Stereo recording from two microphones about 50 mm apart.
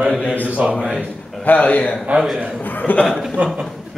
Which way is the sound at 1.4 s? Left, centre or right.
Left.